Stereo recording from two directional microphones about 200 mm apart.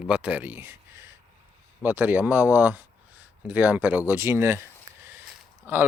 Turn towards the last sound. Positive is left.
turn(degrees=-10)  # may be behind; listen again after turning